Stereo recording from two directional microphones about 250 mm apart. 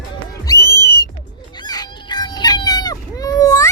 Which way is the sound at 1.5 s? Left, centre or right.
Centre.